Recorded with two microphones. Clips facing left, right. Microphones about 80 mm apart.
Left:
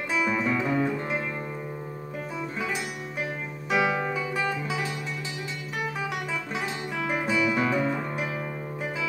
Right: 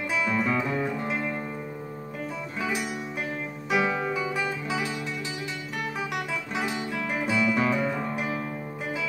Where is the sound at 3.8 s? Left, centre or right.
Centre.